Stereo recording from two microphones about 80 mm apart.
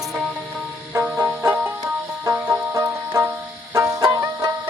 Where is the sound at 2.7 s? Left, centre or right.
Right.